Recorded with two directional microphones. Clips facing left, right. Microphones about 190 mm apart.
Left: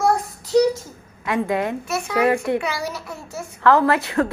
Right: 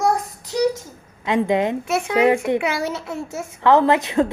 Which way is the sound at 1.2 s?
20° right (ahead or behind).